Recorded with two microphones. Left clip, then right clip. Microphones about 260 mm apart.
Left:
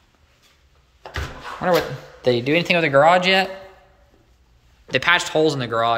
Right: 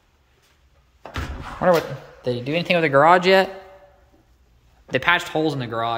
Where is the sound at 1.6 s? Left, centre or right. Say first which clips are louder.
Right 2 dB; centre.